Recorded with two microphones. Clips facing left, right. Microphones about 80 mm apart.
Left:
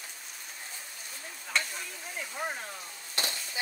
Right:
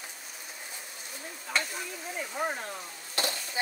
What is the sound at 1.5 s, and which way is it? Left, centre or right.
Stir, centre.